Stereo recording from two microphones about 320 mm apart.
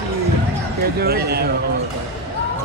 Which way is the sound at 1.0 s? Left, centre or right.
Right.